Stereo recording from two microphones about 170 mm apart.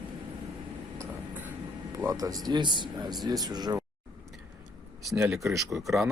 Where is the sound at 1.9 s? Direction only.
20° right (ahead or behind).